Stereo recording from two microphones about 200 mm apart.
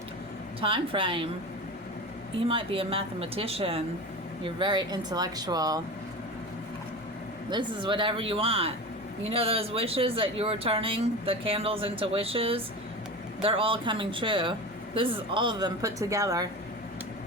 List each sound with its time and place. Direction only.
0.6 s speech: 25° right (ahead or behind)
2.5 s speech: 25° right (ahead or behind)
7.5 s speech: 25° right (ahead or behind)